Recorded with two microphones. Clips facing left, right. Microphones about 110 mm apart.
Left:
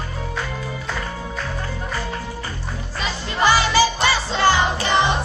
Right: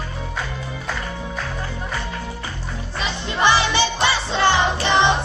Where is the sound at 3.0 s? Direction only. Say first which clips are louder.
Even; 25° right (ahead or behind).